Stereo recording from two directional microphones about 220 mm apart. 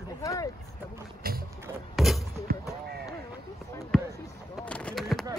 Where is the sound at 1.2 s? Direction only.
40° right (ahead or behind).